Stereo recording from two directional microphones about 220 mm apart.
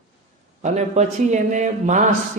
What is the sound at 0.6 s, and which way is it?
Speech, 30° right (ahead or behind).